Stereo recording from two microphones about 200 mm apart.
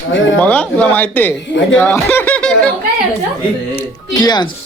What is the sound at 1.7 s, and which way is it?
Snicker, 10° left (ahead or behind).